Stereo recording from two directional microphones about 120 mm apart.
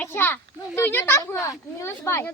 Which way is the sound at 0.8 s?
20° left (ahead or behind).